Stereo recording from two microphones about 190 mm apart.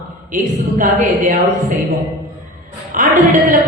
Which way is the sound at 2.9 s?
45° right (ahead or behind).